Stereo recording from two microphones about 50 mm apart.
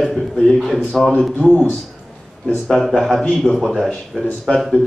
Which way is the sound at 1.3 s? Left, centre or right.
Left.